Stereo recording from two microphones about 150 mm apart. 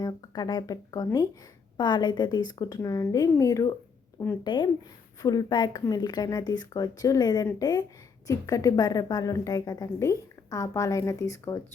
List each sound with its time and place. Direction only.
0.0 s a woman's voice: 25° left (ahead or behind)